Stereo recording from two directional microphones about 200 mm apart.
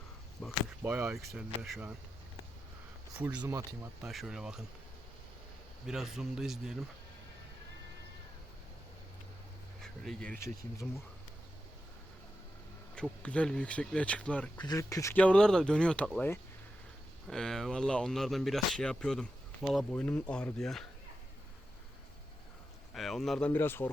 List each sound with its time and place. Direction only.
0.4 s speech: centre (ahead or behind)
0.9 s speech: 10° right (ahead or behind)
3.3 s speech: 20° right (ahead or behind)
4.0 s speech: centre (ahead or behind)
5.8 s speech: centre (ahead or behind)
9.8 s speech: centre (ahead or behind)
13.0 s speech: 5° left (ahead or behind)
14.7 s speech: 15° left (ahead or behind)
23.0 s speech: centre (ahead or behind)
23.5 s speech: 10° left (ahead or behind)